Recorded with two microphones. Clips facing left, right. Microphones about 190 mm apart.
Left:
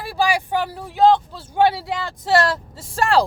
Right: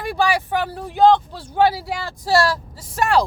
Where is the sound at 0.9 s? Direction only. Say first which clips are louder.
Right 1 dB; centre (ahead or behind).